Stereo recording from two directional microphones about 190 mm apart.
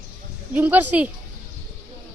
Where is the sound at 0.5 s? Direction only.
10° right (ahead or behind).